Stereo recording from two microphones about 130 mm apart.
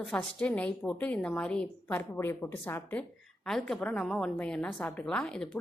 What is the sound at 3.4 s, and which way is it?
A woman's voice, 5° left (ahead or behind).